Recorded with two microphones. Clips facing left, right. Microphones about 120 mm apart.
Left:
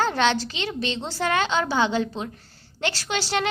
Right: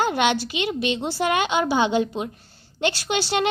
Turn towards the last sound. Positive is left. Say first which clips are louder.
# right 3 dB
turn(degrees=-20)  # may be behind; listen again after turning